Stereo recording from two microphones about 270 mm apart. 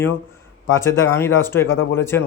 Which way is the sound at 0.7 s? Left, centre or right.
Centre.